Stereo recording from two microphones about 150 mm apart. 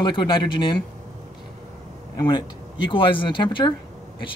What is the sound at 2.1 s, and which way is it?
Speech, 30° left (ahead or behind).